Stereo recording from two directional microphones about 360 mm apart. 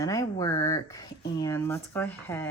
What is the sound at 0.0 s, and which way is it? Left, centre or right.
Speech, centre.